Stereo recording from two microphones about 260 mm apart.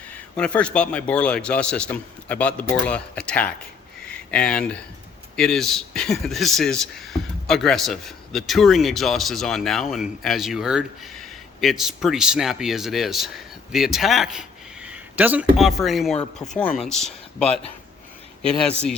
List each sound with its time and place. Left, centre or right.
0.3 s a man's voice: centre
18.4 s a man's voice: centre